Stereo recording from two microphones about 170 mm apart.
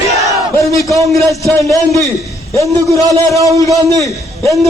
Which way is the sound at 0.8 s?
20° left (ahead or behind).